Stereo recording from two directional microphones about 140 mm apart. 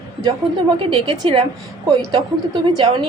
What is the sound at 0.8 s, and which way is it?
Speech, 40° right (ahead or behind).